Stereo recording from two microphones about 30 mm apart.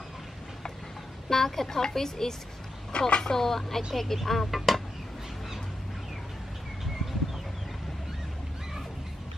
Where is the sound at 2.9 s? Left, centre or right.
Left.